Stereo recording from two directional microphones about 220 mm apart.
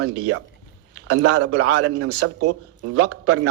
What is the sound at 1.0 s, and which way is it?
Speech, 90° right.